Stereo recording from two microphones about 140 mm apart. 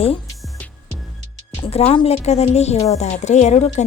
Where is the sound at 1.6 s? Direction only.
45° left (ahead or behind).